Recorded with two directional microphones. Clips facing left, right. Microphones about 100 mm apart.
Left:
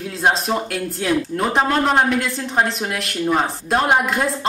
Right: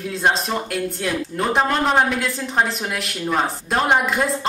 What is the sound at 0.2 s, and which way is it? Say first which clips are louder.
A woman's voice: left 2 dB; centre (ahead or behind).